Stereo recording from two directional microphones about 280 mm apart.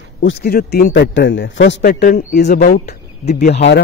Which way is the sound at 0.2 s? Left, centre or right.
Left.